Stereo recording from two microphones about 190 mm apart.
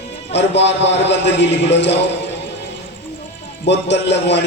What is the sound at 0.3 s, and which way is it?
A man's voice, 65° left (ahead or behind).